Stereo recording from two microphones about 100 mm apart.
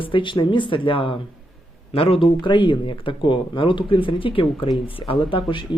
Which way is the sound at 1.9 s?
70° left (ahead or behind).